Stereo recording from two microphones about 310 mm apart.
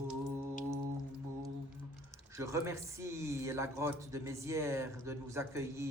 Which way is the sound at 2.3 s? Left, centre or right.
Centre.